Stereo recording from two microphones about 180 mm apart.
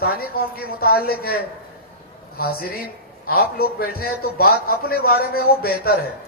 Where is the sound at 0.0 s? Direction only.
60° left (ahead or behind).